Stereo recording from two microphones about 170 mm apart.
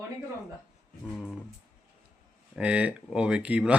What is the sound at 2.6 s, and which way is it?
Speech, 5° right (ahead or behind).